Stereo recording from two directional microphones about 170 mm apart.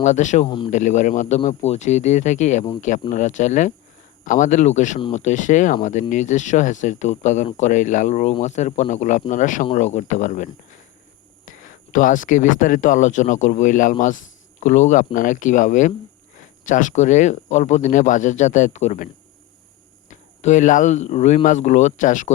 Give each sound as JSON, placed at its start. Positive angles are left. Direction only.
{"t": 0.0, "sound": "speech", "side_deg": 45}
{"t": 0.4, "sound": "speech", "side_deg": 30}
{"t": 0.7, "sound": "speech", "side_deg": 45}
{"t": 20.1, "sound": "speech", "side_deg": 45}